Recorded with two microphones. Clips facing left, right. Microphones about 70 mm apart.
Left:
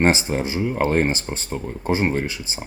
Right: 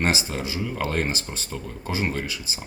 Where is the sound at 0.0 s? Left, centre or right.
Left.